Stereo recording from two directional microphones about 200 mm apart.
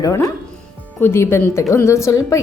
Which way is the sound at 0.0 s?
15° left (ahead or behind).